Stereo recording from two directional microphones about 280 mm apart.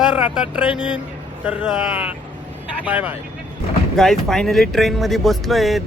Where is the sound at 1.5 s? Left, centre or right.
Centre.